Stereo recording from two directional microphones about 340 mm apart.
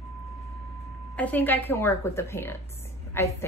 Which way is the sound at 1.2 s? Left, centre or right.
Centre.